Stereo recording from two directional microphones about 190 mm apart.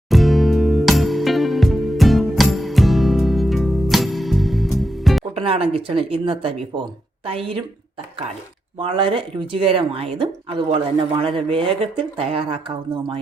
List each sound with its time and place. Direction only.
0.1 s music: centre (ahead or behind)
5.3 s speech: 30° right (ahead or behind)
8.8 s speech: 30° right (ahead or behind)